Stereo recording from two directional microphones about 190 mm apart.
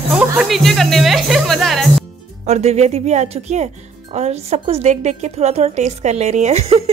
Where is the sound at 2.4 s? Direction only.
35° right (ahead or behind).